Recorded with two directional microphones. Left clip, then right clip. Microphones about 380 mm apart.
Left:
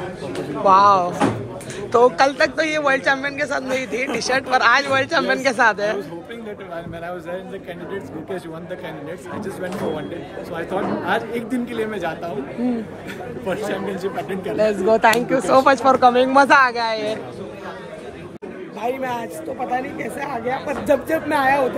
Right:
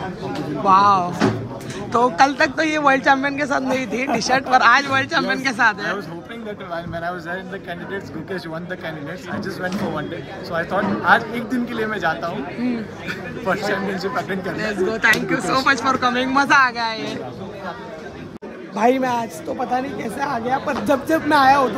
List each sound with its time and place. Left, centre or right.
0.7 s a man's voice: centre
11.1 s a man's voice: centre
14.6 s speech: centre
18.8 s a man's voice: centre